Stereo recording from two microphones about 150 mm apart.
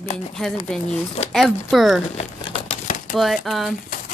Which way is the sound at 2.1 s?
45° left (ahead or behind).